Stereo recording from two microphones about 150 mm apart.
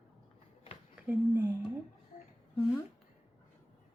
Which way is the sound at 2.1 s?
60° left (ahead or behind).